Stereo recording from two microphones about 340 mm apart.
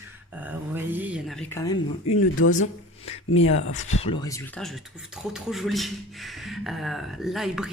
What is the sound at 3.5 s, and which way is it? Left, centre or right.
Speech, left.